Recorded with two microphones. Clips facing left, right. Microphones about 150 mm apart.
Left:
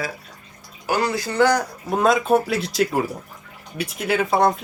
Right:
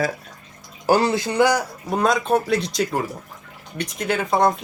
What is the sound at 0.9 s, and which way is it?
Speech, 30° right (ahead or behind).